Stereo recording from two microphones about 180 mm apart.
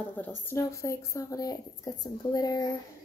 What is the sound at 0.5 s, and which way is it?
Speech, 15° left (ahead or behind).